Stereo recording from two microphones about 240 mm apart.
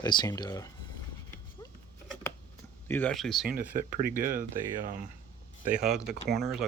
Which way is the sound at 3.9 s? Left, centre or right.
Right.